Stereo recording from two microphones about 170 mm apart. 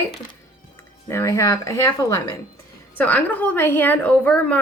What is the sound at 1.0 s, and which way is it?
Speech, 15° left (ahead or behind).